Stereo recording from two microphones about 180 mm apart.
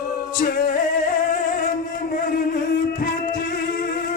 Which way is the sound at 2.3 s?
50° left (ahead or behind).